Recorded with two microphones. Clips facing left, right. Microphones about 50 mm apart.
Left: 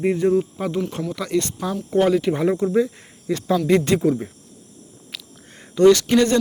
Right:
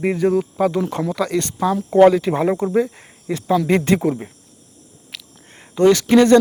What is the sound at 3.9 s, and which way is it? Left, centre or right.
Speech, right.